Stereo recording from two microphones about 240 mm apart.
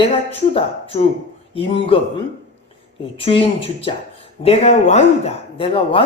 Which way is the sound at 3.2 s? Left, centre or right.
Left.